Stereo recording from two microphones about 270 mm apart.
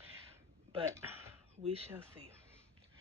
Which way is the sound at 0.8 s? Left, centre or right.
Centre.